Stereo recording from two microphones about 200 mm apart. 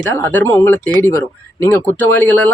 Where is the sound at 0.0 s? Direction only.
10° left (ahead or behind).